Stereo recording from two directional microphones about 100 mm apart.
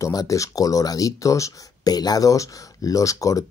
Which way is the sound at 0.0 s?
35° left (ahead or behind).